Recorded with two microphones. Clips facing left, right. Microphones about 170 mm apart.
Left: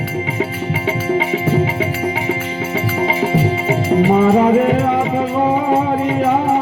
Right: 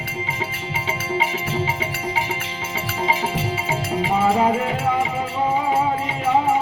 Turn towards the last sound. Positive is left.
turn(degrees=55)  # may be behind; listen again after turning